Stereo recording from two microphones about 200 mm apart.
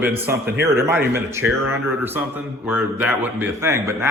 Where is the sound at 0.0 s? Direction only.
10° right (ahead or behind).